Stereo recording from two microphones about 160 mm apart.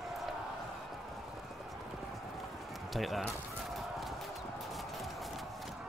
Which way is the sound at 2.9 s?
Centre (ahead or behind).